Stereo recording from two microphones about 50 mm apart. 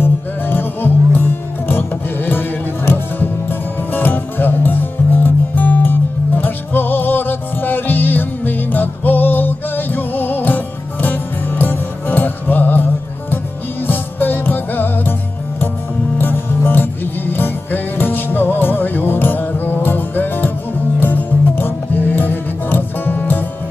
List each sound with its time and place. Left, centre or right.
0.0 s music: left
16.2 s music: left